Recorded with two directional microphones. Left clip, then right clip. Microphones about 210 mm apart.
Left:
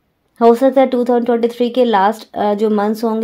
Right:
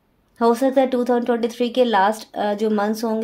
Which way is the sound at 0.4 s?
45° left (ahead or behind).